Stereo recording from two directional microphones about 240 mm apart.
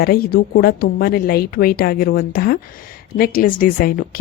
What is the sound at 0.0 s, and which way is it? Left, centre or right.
A woman's voice, left.